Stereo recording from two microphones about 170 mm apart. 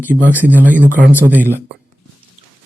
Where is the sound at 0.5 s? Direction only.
10° right (ahead or behind).